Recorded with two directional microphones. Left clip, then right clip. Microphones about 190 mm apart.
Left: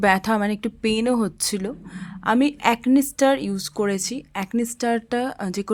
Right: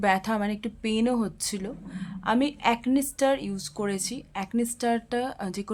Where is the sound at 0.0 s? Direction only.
30° left (ahead or behind).